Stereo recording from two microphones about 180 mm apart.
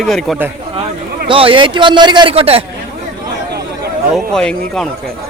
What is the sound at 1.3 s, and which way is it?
A man's voice, 30° right (ahead or behind).